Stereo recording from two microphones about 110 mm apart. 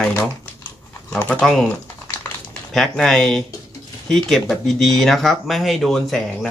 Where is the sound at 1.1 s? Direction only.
10° left (ahead or behind).